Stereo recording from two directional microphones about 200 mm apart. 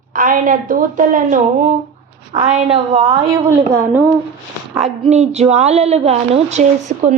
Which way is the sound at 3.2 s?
15° right (ahead or behind).